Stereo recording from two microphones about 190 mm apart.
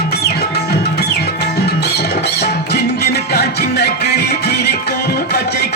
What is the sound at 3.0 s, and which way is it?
Music, 60° left (ahead or behind).